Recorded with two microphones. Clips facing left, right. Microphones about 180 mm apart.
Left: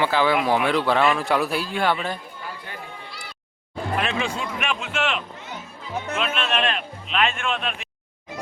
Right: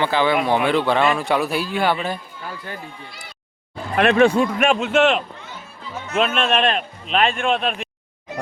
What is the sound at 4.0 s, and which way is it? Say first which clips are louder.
A man's voice: right 14 dB; 60° right (ahead or behind).